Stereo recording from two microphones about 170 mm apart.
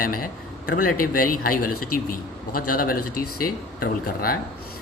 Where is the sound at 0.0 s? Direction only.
55° left (ahead or behind).